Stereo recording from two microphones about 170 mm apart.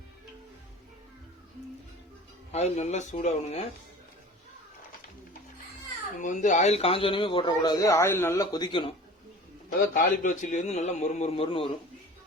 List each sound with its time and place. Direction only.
2.5 s a man's voice: 40° left (ahead or behind)
6.2 s speech: 45° left (ahead or behind); by 8.9 s 25° left (ahead or behind)
9.9 s a man's voice: 50° left (ahead or behind); by 11.7 s 30° left (ahead or behind)